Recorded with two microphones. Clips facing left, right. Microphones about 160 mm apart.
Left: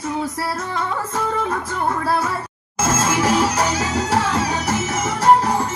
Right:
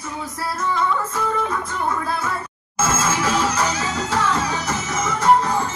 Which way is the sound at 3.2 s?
65° left (ahead or behind).